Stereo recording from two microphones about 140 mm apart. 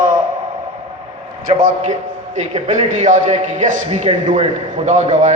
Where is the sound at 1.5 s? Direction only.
55° right (ahead or behind).